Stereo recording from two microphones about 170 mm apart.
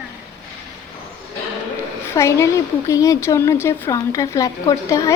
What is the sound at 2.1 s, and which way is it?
A woman's voice, 15° left (ahead or behind).